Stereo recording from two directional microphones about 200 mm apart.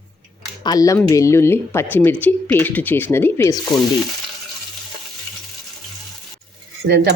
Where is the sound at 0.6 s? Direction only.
20° left (ahead or behind).